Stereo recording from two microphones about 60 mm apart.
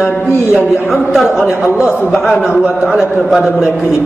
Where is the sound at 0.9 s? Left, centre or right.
Centre.